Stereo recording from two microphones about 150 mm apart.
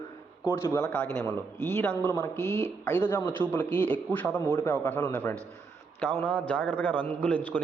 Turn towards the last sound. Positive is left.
turn(degrees=10)  # may be behind; listen again after turning